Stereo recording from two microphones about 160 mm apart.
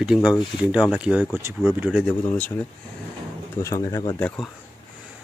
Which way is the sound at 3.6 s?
20° left (ahead or behind).